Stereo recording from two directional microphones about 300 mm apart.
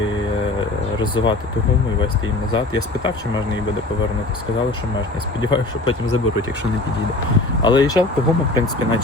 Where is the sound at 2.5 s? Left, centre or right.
Centre.